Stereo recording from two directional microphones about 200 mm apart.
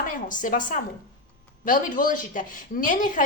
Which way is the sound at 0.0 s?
40° left (ahead or behind).